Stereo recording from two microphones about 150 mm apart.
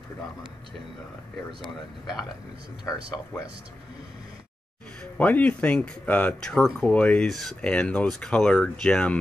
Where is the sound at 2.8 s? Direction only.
20° left (ahead or behind).